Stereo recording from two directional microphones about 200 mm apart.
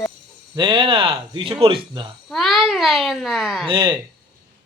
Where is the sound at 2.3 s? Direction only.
Centre (ahead or behind).